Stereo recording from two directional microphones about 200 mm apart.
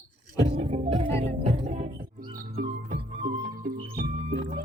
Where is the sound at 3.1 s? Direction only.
35° right (ahead or behind).